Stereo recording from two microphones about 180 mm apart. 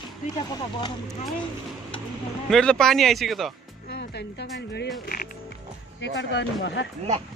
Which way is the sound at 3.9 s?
70° left (ahead or behind).